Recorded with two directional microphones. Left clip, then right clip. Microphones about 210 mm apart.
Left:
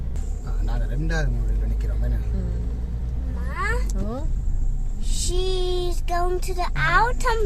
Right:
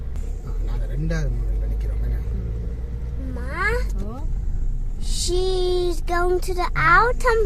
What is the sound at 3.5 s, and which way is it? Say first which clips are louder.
Cat: right 4 dB; 45° right (ahead or behind).